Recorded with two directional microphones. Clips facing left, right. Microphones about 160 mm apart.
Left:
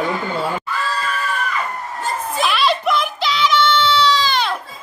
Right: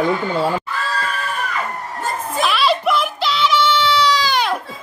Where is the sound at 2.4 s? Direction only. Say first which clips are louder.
Right 1 dB; centre (ahead or behind).